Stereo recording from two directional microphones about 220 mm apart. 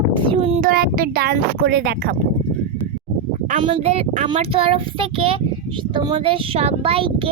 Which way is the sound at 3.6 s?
25° right (ahead or behind).